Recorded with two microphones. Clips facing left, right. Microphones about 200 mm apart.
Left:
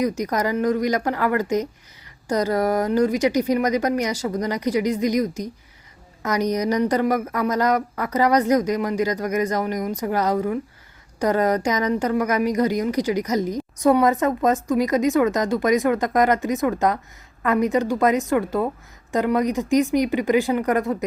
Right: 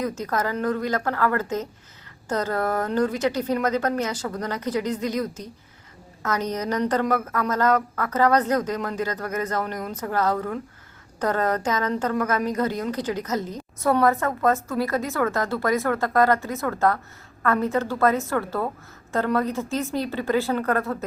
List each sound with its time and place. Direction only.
0.0 s a woman's voice: 15° left (ahead or behind)